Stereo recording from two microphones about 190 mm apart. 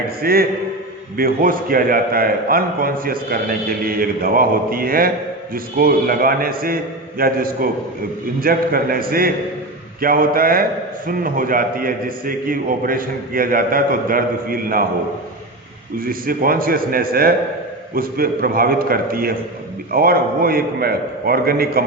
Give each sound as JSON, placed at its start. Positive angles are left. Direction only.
{"t": 0.2, "sound": "a man's voice", "side_deg": -50}
{"t": 16.0, "sound": "a man's voice", "side_deg": -50}